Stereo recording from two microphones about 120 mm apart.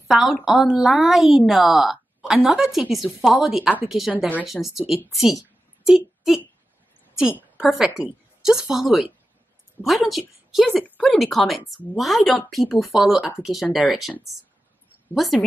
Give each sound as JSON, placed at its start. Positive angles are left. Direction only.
{"t": 0.1, "sound": "a woman's voice", "side_deg": -5}
{"t": 11.1, "sound": "a woman's voice", "side_deg": 0}
{"t": 15.1, "sound": "a woman's voice", "side_deg": 0}